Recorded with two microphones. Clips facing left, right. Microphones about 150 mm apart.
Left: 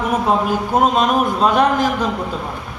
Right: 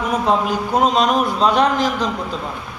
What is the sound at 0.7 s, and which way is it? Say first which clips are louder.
Speech: even; 5° left (ahead or behind).